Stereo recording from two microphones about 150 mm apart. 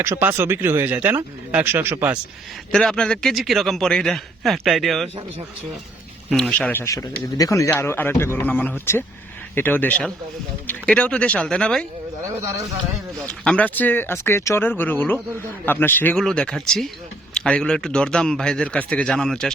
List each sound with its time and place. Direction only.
0.0 s speech: 15° right (ahead or behind)
2.7 s speech: 5° left (ahead or behind)
6.3 s speech: 10° left (ahead or behind)
13.2 s speech: 5° left (ahead or behind)